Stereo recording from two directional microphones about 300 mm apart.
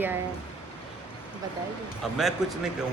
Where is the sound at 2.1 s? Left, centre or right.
Centre.